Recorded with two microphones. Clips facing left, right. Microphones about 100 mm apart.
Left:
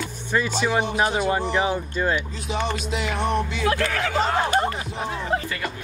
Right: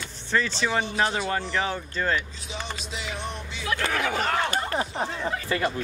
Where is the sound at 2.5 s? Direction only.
60° left (ahead or behind).